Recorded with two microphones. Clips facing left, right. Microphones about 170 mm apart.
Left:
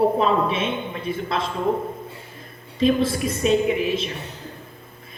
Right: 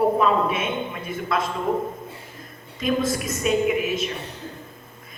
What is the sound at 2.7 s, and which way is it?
A man's voice, 30° left (ahead or behind).